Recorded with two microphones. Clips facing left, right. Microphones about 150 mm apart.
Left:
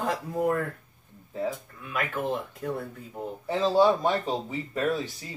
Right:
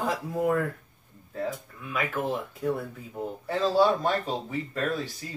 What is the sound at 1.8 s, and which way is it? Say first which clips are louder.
A man's voice: right 1 dB; centre (ahead or behind).